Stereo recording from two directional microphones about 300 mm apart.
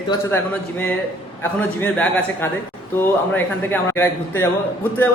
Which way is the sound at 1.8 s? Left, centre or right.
Centre.